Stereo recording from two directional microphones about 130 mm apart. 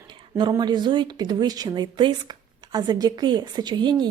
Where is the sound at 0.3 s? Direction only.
35° right (ahead or behind).